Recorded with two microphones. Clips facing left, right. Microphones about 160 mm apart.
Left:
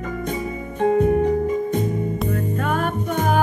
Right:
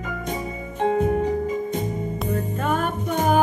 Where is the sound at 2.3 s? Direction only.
Centre (ahead or behind).